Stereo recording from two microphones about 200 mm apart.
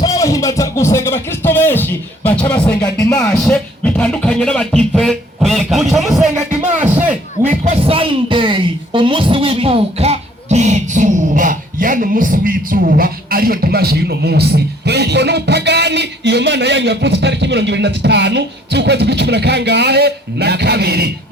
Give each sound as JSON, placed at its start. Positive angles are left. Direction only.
{"t": 0.0, "sound": "speech", "side_deg": 15}
{"t": 2.8, "sound": "music", "side_deg": 15}
{"t": 7.4, "sound": "speech", "side_deg": -35}